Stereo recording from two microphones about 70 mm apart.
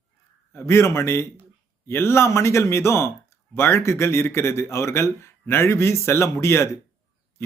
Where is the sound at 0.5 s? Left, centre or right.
Left.